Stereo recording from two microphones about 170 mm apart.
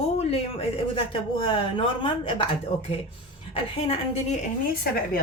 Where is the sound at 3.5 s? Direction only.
35° left (ahead or behind).